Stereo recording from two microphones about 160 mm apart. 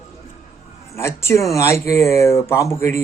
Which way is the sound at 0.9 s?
15° left (ahead or behind).